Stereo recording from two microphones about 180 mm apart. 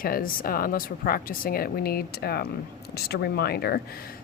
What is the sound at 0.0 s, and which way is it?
A woman's voice, 50° left (ahead or behind).